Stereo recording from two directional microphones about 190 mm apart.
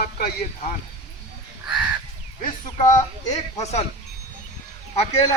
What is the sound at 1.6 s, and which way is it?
Crow, 5° right (ahead or behind).